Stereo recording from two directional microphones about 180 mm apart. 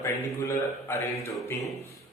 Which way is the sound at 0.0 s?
15° left (ahead or behind).